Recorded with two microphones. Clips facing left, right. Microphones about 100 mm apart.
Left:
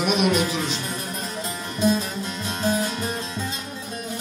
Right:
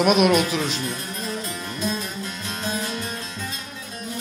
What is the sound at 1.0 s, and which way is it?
Music, 25° left (ahead or behind).